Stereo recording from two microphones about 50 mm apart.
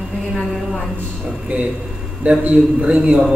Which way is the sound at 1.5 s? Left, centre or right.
Right.